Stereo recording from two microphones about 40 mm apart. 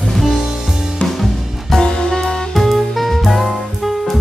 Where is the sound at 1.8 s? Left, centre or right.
Centre.